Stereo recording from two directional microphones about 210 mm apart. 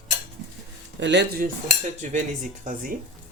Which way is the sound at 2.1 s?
35° right (ahead or behind).